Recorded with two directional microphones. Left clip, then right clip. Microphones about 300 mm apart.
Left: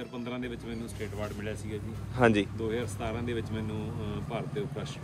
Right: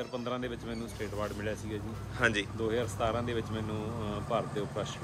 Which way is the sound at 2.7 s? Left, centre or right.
Centre.